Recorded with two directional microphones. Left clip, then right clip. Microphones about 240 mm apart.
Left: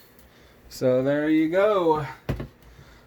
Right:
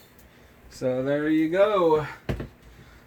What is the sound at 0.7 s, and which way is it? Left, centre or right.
Speech, left.